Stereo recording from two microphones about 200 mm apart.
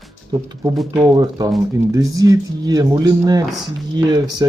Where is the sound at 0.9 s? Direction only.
20° right (ahead or behind).